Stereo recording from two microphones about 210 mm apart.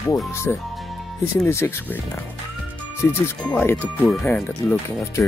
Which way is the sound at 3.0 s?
10° left (ahead or behind).